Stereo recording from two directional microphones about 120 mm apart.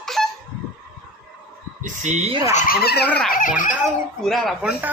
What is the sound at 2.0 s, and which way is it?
Speech, 85° right.